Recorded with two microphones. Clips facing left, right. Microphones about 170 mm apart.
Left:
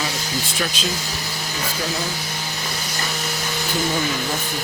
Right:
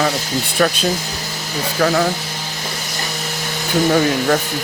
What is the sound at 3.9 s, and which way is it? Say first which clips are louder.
Speech: right 9 dB; 65° right (ahead or behind).